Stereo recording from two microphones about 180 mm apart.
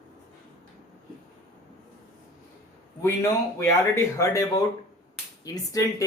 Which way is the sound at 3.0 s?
15° left (ahead or behind).